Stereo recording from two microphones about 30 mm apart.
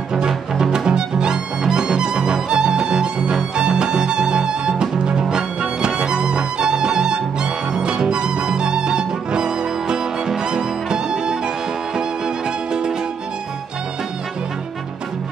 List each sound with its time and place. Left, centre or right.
0.6 s music: right